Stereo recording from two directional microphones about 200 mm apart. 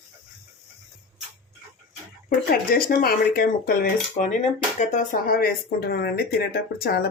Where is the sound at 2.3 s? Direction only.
50° left (ahead or behind).